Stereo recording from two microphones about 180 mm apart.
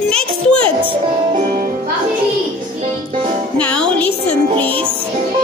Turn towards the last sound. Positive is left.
turn(degrees=5)  # may be behind; listen again after turning